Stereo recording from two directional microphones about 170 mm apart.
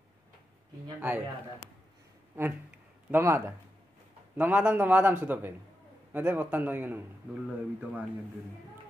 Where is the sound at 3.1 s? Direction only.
15° right (ahead or behind).